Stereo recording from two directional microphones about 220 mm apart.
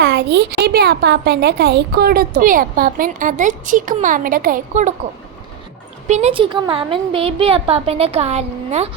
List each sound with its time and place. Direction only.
0.0 s a woman's voice: 50° right (ahead or behind); by 4.9 s 35° right (ahead or behind)
6.1 s a woman's voice: 30° right (ahead or behind)